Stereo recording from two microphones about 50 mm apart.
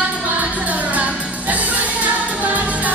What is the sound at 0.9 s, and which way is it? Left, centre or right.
Music, right.